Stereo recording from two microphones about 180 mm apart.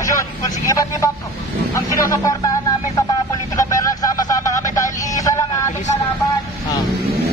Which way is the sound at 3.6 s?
20° left (ahead or behind).